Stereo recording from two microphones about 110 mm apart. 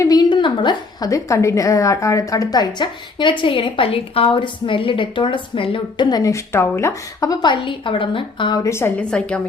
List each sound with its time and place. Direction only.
0.0 s a woman's voice: 35° left (ahead or behind)
8.5 s a woman's voice: 25° left (ahead or behind)
9.0 s a woman's voice: 10° left (ahead or behind)